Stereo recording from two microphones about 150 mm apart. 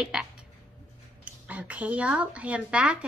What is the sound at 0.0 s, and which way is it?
Frog, 5° right (ahead or behind).